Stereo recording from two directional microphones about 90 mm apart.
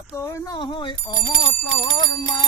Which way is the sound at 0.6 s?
65° left (ahead or behind).